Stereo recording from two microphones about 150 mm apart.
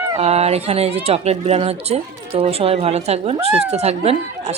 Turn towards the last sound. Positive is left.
turn(degrees=-45)  # may be behind; listen again after turning